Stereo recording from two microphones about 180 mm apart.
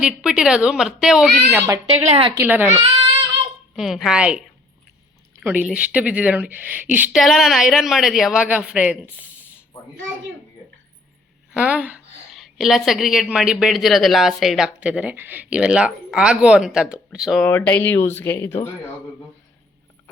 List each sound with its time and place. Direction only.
0.0 s a woman's voice: 5° right (ahead or behind)
1.5 s a woman's voice: 20° right (ahead or behind)
1.9 s a woman's voice: 35° right (ahead or behind)
2.3 s a woman's voice: 10° right (ahead or behind)
3.8 s a woman's voice: centre (ahead or behind)
11.5 s a woman's voice: 10° right (ahead or behind); by 18.7 s 15° left (ahead or behind)